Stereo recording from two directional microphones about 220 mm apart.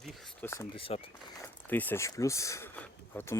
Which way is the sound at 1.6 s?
10° left (ahead or behind).